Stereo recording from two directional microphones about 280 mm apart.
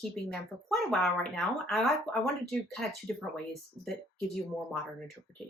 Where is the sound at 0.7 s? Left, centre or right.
Centre.